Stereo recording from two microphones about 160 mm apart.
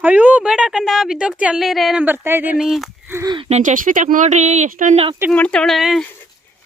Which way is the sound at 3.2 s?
30° right (ahead or behind).